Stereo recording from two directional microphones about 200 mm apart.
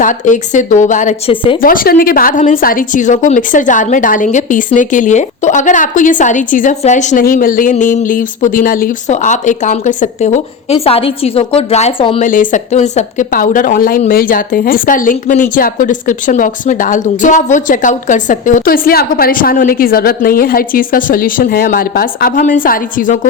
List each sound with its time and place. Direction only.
0.0 s a woman's voice: 40° left (ahead or behind)
12.2 s a woman's voice: 40° left (ahead or behind)